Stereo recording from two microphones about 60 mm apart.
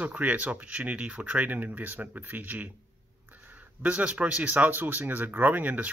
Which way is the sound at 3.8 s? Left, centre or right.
Right.